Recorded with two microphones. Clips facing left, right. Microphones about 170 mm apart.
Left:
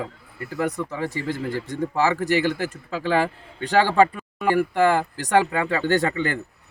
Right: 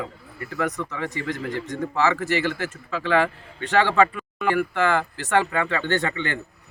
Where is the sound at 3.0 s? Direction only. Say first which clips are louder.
Right 1 dB; 40° left (ahead or behind).